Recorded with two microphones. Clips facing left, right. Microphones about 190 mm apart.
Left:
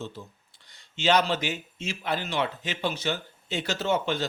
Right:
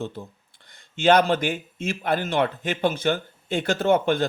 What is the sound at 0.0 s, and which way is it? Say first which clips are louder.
A man's voice: right 6 dB; 55° right (ahead or behind).